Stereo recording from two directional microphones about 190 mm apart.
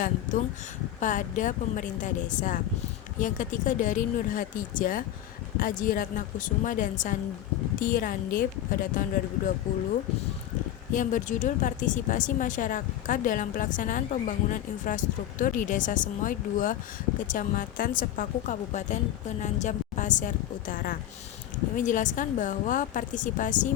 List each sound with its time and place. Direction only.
0.0 s a woman's voice: 45° left (ahead or behind)
10.9 s a woman's voice: 45° left (ahead or behind)